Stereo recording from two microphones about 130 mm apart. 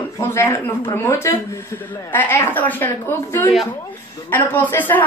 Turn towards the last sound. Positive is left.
turn(degrees=15)  # may be behind; listen again after turning